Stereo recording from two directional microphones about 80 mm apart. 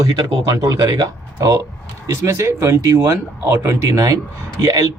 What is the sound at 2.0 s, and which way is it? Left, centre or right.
Speech, right.